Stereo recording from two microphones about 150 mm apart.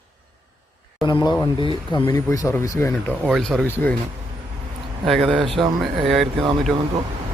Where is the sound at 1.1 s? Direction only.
30° left (ahead or behind).